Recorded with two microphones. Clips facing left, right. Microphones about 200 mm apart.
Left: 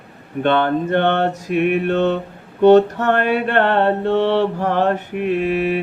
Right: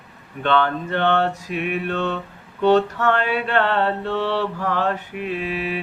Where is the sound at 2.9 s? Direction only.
45° left (ahead or behind).